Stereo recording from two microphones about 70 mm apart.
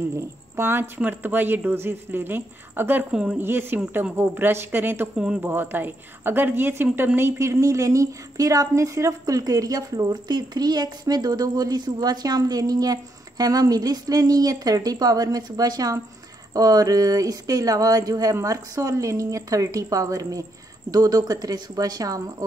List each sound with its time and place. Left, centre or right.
0.1 s speech: right
3.1 s speech: centre
3.3 s a woman's voice: right
5.1 s speech: centre
5.4 s a woman's voice: right
18.3 s speech: right